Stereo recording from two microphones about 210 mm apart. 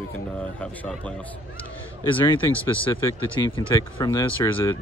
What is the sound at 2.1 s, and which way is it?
A man's voice, 25° left (ahead or behind).